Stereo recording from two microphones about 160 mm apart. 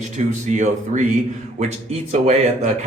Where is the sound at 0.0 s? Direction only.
45° right (ahead or behind).